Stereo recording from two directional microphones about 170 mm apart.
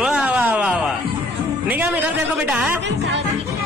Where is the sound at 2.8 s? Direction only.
90° right.